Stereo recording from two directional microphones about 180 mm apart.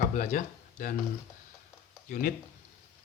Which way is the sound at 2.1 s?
50° left (ahead or behind).